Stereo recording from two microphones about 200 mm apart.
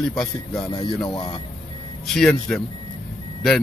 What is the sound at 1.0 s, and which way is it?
Speech, 25° left (ahead or behind).